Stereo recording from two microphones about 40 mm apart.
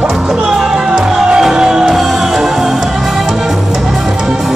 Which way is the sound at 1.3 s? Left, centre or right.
Centre.